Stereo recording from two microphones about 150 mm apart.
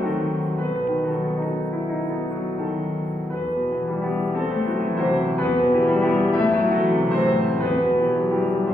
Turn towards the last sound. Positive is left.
turn(degrees=10)  # may be behind; listen again after turning